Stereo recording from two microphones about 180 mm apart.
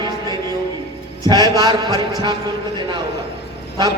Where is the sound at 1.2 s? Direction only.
20° right (ahead or behind).